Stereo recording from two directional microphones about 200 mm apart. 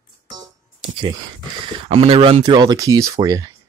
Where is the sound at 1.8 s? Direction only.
30° right (ahead or behind).